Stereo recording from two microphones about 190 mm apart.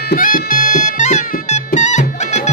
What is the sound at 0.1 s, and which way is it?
Music, 45° left (ahead or behind).